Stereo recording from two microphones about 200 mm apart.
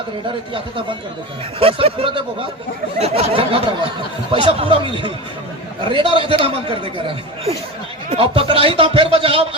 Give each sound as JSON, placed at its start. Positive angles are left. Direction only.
{"t": 1.5, "sound": "a man's voice", "side_deg": -30}
{"t": 5.9, "sound": "a man's voice", "side_deg": -25}
{"t": 8.1, "sound": "a man's voice", "side_deg": -25}